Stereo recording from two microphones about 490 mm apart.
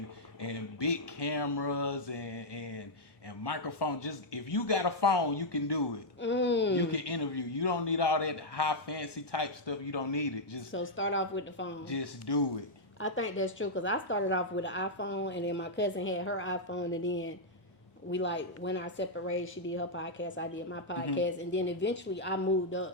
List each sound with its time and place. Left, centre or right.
0.4 s a man's voice: left
6.2 s a woman's voice: left
6.9 s a man's voice: left
10.7 s a woman's voice: left
11.9 s speech: left
13.0 s a woman's voice: left